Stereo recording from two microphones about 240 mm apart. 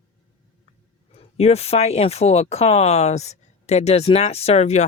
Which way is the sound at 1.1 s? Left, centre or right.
Left.